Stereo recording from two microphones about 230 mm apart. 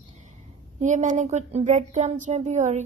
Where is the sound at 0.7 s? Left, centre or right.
Right.